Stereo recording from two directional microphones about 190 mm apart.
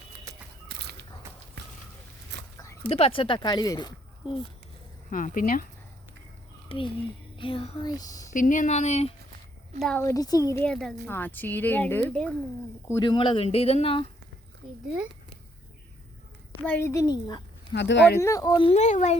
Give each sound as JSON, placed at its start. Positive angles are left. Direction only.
{"t": 0.7, "sound": "a sound", "side_deg": -60}
{"t": 2.9, "sound": "speech", "side_deg": 30}
{"t": 5.1, "sound": "speech", "side_deg": 45}
{"t": 6.7, "sound": "speech", "side_deg": 25}
{"t": 8.3, "sound": "speech", "side_deg": 45}
{"t": 10.0, "sound": "speech", "side_deg": 15}
{"t": 12.9, "sound": "speech", "side_deg": 25}
{"t": 16.6, "sound": "speech", "side_deg": 10}
{"t": 17.7, "sound": "speech", "side_deg": 65}
{"t": 18.2, "sound": "speech", "side_deg": 15}